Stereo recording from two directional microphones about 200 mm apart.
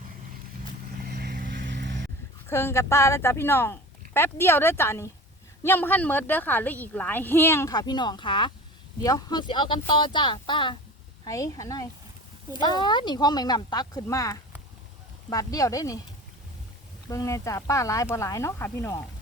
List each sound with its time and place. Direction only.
1.0 s vehicle: 55° right (ahead or behind)
2.5 s a woman's voice: 10° left (ahead or behind)
17.1 s a woman's voice: 15° left (ahead or behind)